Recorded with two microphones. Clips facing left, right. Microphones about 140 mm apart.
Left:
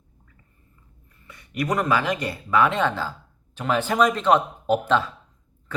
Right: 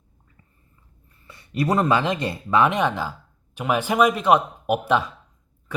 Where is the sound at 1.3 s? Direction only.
30° right (ahead or behind).